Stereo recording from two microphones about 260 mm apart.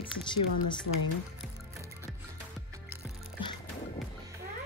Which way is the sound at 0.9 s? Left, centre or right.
Left.